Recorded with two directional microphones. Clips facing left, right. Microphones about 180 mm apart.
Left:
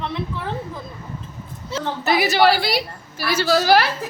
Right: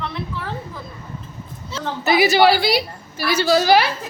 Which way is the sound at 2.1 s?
Centre (ahead or behind).